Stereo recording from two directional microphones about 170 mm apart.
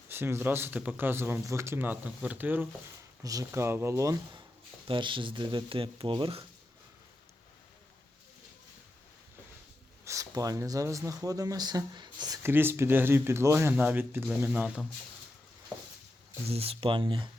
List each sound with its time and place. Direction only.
0.1 s speech: 15° right (ahead or behind); by 6.4 s 30° right (ahead or behind)
10.0 s speech: 20° right (ahead or behind)
16.5 s speech: 35° right (ahead or behind)